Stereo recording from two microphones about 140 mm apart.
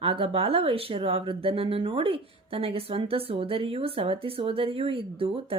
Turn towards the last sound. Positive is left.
turn(degrees=-40)  # may be behind; listen again after turning